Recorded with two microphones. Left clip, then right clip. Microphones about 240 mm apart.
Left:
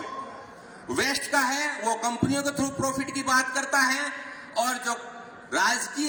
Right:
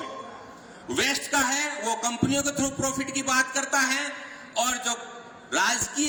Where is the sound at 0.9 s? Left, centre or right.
Right.